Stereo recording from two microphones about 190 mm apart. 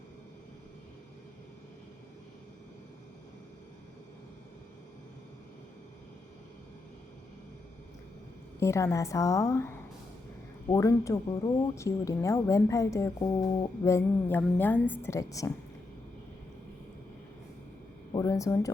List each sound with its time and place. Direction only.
8.5 s speech: 15° left (ahead or behind)
18.1 s speech: 20° left (ahead or behind)